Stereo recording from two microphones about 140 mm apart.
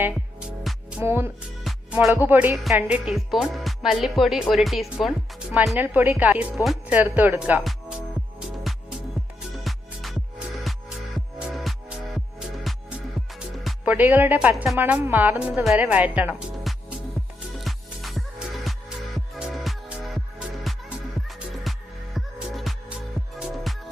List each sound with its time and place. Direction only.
0.0 s music: 5° right (ahead or behind)
1.0 s a woman's voice: 15° right (ahead or behind)
1.6 s music: 5° right (ahead or behind)
2.2 s a woman's voice: 15° right (ahead or behind)
5.7 s a woman's voice: 15° right (ahead or behind)
8.4 s music: 5° right (ahead or behind)
13.7 s speech: 10° right (ahead or behind)
14.5 s speech: centre (ahead or behind)
14.8 s a woman's voice: 15° right (ahead or behind)
16.7 s music: centre (ahead or behind)
21.2 s music: centre (ahead or behind)